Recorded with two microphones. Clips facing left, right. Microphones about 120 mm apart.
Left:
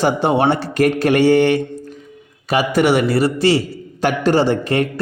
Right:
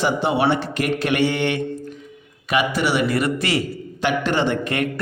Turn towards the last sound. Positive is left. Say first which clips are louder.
# left 5 dB
turn(degrees=35)  # may be behind; listen again after turning